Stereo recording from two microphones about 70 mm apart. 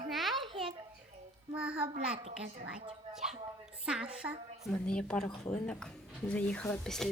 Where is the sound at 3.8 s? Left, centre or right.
Centre.